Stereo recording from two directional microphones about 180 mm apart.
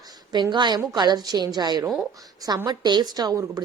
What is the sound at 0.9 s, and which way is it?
A woman's voice, 25° right (ahead or behind).